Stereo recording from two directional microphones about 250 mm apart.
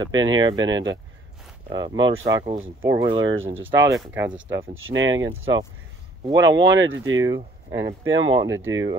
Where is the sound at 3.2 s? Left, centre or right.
Right.